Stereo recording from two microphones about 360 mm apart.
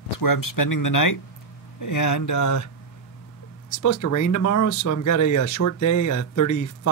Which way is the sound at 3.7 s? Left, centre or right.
Left.